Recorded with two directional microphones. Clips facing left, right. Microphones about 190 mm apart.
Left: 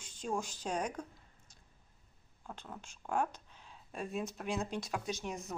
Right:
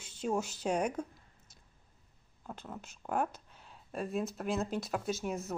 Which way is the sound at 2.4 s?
5° right (ahead or behind).